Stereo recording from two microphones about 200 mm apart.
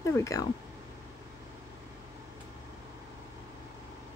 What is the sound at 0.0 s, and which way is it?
Speech, 15° left (ahead or behind).